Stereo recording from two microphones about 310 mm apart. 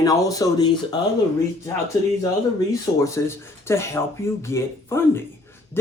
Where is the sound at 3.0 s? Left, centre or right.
Centre.